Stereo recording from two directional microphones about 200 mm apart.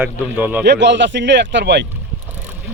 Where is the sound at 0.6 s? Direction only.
60° right (ahead or behind).